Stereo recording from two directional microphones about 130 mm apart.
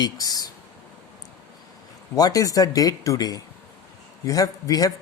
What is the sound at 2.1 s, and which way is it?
Speech, 30° left (ahead or behind).